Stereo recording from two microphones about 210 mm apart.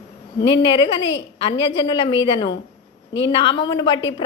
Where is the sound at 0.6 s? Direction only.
25° left (ahead or behind).